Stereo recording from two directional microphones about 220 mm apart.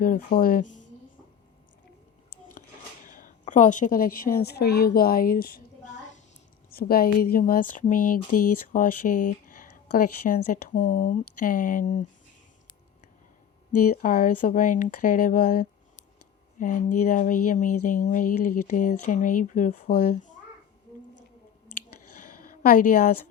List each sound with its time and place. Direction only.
0.0 s a woman's voice: 40° left (ahead or behind)
3.1 s a woman's voice: 35° left (ahead or behind)
6.7 s a woman's voice: 45° left (ahead or behind)
9.0 s speech: 90° left
9.5 s a sound: 35° left (ahead or behind)
10.5 s a woman's voice: 35° left (ahead or behind)
13.9 s a woman's voice: 40° left (ahead or behind)
22.2 s a sound: 40° left (ahead or behind)